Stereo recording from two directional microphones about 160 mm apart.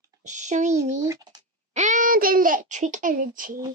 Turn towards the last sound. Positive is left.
turn(degrees=-55)  # may be behind; listen again after turning